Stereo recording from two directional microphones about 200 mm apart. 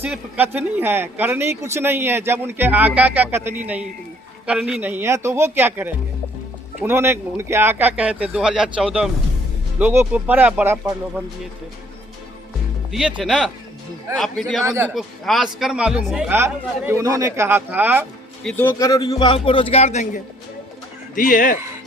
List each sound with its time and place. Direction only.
0.0 s speech: 10° right (ahead or behind)
12.9 s speech: 5° right (ahead or behind)
14.6 s speech: 10° right (ahead or behind)
14.9 s speech: centre (ahead or behind)
18.4 s speech: 10° left (ahead or behind)
18.7 s speech: 20° left (ahead or behind); by 21.6 s 45° left (ahead or behind)